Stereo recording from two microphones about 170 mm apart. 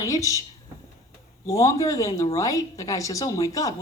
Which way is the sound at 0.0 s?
20° left (ahead or behind).